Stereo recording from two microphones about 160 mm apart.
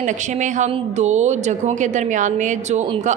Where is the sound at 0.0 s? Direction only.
50° right (ahead or behind).